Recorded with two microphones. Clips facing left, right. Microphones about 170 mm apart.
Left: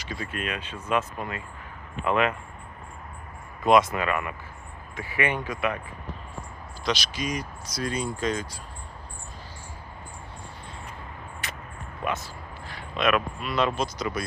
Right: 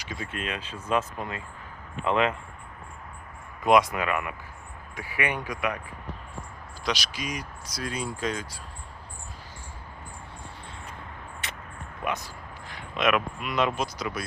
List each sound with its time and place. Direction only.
0.1 s speech: 20° right (ahead or behind)
3.6 s speech: 15° right (ahead or behind)
6.8 s speech: 10° right (ahead or behind)
11.4 s a sound: 25° right (ahead or behind)
12.0 s speech: 15° right (ahead or behind)